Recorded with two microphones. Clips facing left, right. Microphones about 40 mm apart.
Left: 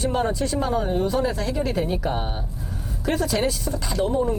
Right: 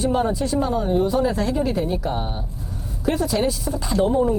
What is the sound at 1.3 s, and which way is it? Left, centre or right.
Speech, right.